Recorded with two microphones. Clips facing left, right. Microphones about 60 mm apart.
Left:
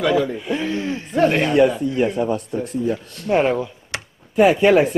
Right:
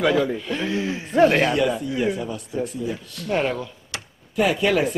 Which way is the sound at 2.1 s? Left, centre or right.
Left.